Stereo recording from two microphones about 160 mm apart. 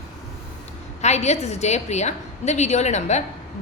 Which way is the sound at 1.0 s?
45° left (ahead or behind).